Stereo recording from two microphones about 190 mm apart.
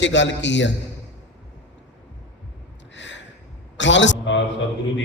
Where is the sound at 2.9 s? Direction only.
70° left (ahead or behind).